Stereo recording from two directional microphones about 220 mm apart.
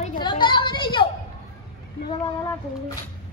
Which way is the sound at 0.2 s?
20° left (ahead or behind).